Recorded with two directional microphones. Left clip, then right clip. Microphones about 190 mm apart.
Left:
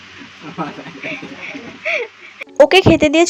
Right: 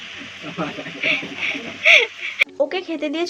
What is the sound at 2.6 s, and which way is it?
Speech, 45° left (ahead or behind).